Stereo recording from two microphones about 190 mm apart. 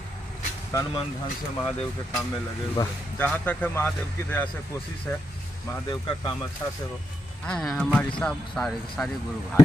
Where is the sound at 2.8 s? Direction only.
10° left (ahead or behind).